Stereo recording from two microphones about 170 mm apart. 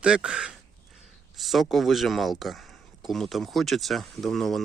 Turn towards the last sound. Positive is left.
turn(degrees=0)  # may be behind; listen again after turning